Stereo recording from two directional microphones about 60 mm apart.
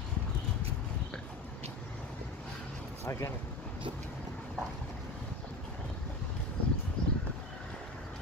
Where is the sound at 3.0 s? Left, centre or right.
Left.